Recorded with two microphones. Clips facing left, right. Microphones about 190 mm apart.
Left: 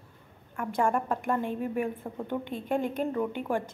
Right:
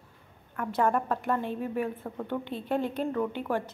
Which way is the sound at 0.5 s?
10° left (ahead or behind).